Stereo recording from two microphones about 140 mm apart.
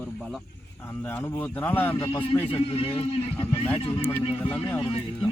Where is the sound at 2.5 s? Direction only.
40° left (ahead or behind).